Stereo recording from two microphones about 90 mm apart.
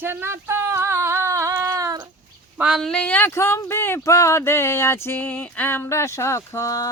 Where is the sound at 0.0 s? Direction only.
25° right (ahead or behind); by 2.0 s 45° right (ahead or behind).